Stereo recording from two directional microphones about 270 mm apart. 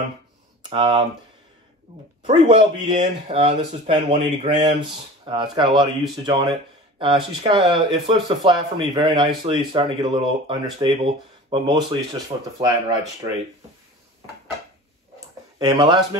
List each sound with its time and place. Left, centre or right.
0.7 s speech: centre
2.2 s speech: centre
15.1 s a sound: centre